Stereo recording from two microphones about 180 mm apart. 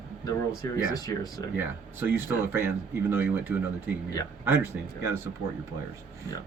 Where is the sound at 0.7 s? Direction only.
20° left (ahead or behind).